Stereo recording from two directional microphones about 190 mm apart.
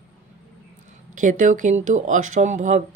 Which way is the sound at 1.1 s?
45° right (ahead or behind).